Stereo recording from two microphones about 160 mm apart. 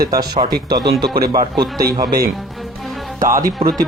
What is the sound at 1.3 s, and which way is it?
Speech, 25° right (ahead or behind).